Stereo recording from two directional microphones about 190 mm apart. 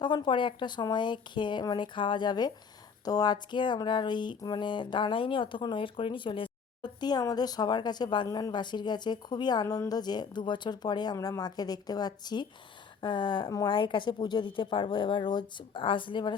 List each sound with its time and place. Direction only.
0.0 s speech: 25° left (ahead or behind)